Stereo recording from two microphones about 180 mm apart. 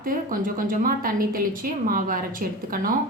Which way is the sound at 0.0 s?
50° right (ahead or behind).